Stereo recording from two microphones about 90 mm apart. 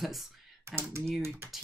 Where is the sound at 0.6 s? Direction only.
30° right (ahead or behind).